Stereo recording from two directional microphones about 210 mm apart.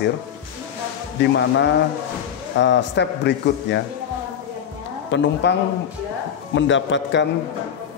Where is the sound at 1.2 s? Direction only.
55° left (ahead or behind).